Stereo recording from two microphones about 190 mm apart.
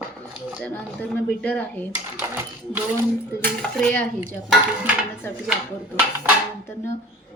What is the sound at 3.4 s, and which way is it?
Speech, 5° left (ahead or behind).